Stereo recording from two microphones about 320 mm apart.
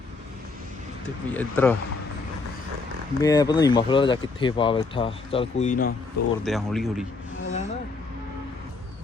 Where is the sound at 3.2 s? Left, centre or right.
Centre.